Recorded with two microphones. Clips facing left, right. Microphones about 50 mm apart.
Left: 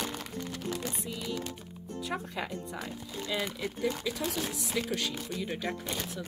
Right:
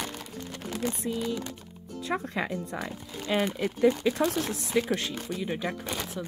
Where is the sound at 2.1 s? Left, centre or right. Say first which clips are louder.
Right 7 dB; right.